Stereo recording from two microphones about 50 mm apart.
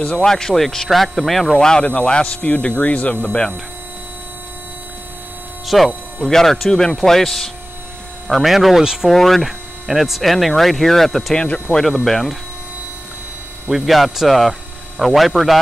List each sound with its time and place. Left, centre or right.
0.0 s speech: centre
0.3 s speech: centre
1.7 s speech: left
5.7 s speech: centre
9.1 s speech: centre
11.3 s speech: centre
11.8 s speech: centre
13.7 s speech: centre